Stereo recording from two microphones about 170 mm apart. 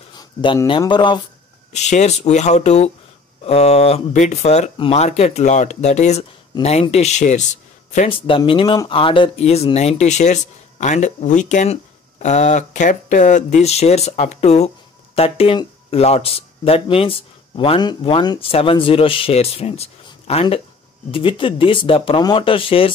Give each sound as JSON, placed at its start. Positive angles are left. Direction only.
{"t": 0.2, "sound": "a sound", "side_deg": 30}
{"t": 0.7, "sound": "speech", "side_deg": 25}
{"t": 1.7, "sound": "speech", "side_deg": 40}
{"t": 8.1, "sound": "speech", "side_deg": 30}